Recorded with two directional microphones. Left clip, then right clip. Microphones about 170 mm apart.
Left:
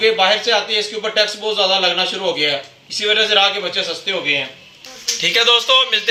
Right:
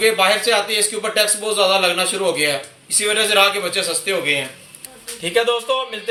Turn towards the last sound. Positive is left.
turn(degrees=5)  # may be behind; listen again after turning